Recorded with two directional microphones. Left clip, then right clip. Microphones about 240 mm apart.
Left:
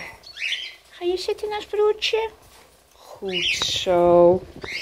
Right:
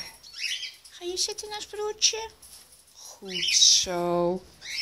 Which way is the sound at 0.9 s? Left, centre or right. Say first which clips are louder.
Left 13 dB; right.